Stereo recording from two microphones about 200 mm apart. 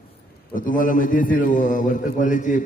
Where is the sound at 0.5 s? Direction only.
45° left (ahead or behind).